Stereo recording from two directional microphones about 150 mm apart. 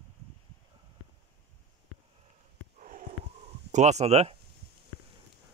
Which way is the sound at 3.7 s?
50° right (ahead or behind).